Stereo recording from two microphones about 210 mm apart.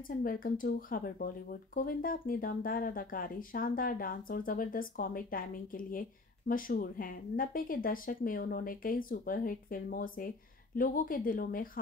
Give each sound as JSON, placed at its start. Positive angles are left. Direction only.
{"t": 0.2, "sound": "a woman's voice", "side_deg": 40}